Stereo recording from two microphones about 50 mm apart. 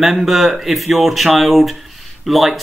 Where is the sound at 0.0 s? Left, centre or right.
Centre.